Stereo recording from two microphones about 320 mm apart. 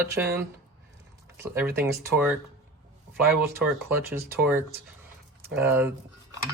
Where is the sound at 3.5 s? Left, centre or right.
Centre.